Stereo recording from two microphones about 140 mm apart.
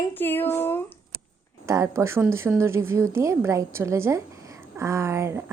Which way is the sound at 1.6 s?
20° right (ahead or behind).